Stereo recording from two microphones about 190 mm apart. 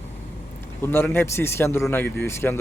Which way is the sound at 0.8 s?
10° left (ahead or behind).